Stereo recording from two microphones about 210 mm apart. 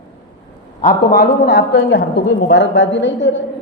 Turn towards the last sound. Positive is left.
turn(degrees=60)  # may be behind; listen again after turning